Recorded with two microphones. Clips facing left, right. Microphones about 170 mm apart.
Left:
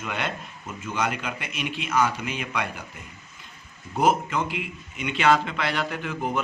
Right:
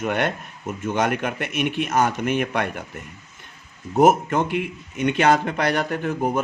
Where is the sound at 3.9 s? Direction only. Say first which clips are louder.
Right 6 dB; 45° right (ahead or behind).